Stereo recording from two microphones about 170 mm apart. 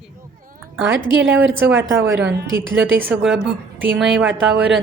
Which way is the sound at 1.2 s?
90° right.